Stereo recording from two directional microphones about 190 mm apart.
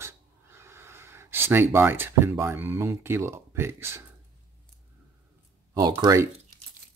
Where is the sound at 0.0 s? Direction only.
15° right (ahead or behind).